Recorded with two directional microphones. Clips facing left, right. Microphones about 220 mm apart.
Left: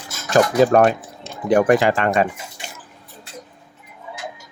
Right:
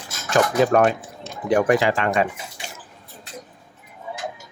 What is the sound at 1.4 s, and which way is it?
Speech, 50° left (ahead or behind).